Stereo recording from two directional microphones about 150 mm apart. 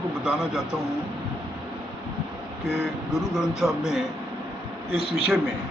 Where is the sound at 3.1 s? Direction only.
Centre (ahead or behind).